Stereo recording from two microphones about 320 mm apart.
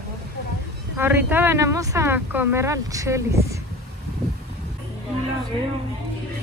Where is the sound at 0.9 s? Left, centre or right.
Centre.